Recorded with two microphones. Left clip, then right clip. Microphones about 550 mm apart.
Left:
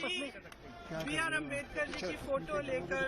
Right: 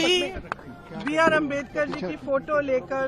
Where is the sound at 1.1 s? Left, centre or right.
Right.